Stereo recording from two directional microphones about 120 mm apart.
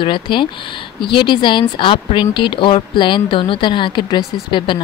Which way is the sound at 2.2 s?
40° left (ahead or behind).